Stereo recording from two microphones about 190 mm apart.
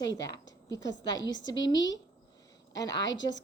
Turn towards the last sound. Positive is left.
turn(degrees=70)  # may be behind; listen again after turning